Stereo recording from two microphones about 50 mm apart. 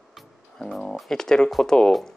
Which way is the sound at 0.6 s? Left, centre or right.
Centre.